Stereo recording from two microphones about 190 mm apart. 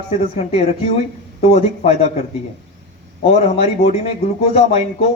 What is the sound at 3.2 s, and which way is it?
Speech, 30° left (ahead or behind).